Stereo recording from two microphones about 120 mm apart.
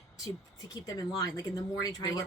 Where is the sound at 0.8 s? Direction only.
30° left (ahead or behind).